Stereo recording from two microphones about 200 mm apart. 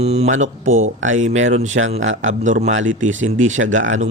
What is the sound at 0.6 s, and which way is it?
Speech, 80° right.